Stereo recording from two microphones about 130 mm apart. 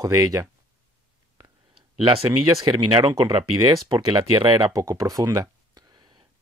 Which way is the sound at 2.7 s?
35° right (ahead or behind).